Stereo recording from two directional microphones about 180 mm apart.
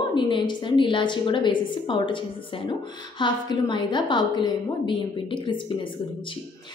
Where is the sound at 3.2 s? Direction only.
25° left (ahead or behind).